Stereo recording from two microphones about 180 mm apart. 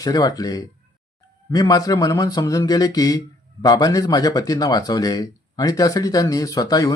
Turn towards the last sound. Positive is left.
turn(degrees=20)  # may be behind; listen again after turning